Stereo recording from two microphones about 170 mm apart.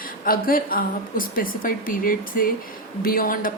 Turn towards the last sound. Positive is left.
turn(degrees=55)  # may be behind; listen again after turning